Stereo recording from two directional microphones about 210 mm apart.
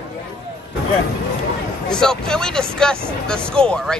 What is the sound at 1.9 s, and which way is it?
Speech, 5° left (ahead or behind).